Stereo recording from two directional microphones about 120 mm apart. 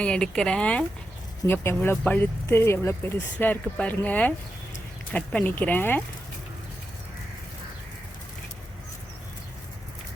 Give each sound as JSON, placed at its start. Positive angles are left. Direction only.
{"t": 0.0, "sound": "speech", "side_deg": 5}